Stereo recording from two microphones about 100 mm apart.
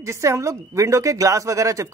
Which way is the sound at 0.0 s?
30° right (ahead or behind).